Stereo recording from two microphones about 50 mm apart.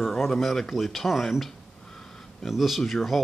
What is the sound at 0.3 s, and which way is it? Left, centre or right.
Speech, centre.